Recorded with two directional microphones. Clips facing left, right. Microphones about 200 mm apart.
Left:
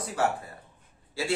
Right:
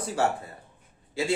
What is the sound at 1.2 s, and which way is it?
Speech, 20° right (ahead or behind).